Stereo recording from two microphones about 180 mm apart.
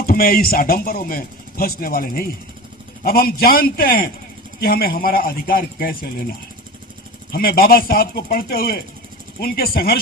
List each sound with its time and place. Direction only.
0.0 s speech: 55° left (ahead or behind)
7.3 s speech: 55° left (ahead or behind)